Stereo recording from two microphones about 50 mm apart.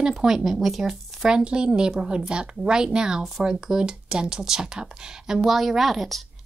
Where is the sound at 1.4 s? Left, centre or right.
Right.